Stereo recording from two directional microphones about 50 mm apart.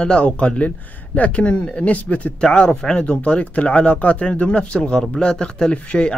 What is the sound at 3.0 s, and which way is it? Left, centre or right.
Speech, left.